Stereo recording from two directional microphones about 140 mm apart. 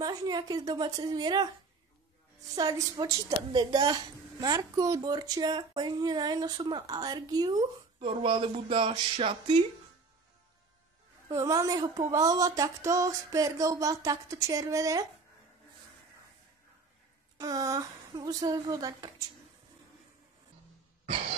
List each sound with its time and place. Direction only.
0.0 s a woman's voice: 30° right (ahead or behind)
2.5 s a woman's voice: 25° right (ahead or behind)
11.2 s a woman's voice: 25° right (ahead or behind)
17.4 s a woman's voice: 25° right (ahead or behind)